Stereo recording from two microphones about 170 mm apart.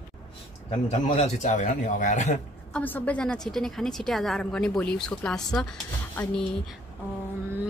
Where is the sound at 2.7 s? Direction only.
10° left (ahead or behind).